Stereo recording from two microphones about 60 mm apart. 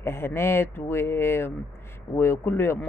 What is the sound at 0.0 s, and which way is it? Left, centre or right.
Speech, left.